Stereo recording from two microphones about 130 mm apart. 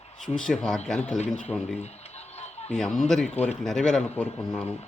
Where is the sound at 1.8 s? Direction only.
55° left (ahead or behind).